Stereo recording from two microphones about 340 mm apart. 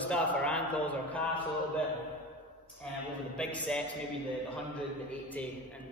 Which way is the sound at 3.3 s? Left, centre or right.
Centre.